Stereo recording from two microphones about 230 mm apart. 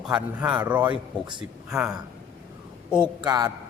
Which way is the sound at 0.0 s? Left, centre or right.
Centre.